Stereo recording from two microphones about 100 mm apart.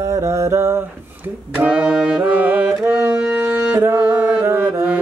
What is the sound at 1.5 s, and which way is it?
Music, 15° right (ahead or behind).